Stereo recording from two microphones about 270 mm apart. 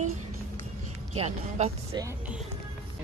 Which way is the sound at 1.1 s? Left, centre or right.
Right.